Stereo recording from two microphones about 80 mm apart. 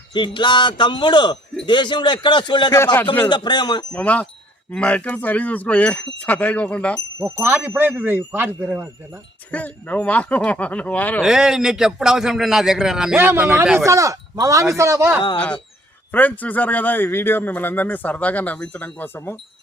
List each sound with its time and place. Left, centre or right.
0.1 s speech: left
3.9 s chime: centre
4.7 s speech: centre
7.2 s speech: right
7.4 s speech: right
9.5 s speech: centre
11.2 s a man's voice: centre
13.1 s speech: right
13.7 s speech: right
15.4 s chime: centre
16.1 s speech: left